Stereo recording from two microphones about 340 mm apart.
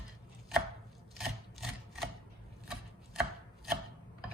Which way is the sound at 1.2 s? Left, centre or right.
Centre.